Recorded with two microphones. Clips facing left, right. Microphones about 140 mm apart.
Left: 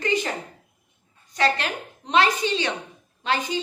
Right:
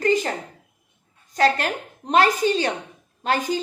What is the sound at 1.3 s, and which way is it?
A woman's voice, 45° right (ahead or behind).